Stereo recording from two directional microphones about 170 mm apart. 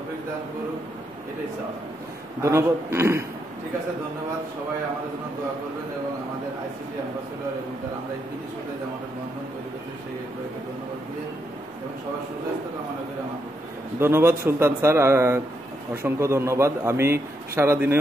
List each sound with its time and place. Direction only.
2.4 s a man's voice: 15° right (ahead or behind)
13.9 s a man's voice: 15° right (ahead or behind)